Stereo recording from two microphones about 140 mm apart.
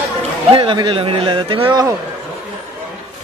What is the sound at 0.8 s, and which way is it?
A man's voice, 40° right (ahead or behind).